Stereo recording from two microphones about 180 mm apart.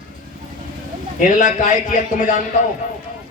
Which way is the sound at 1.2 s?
45° left (ahead or behind).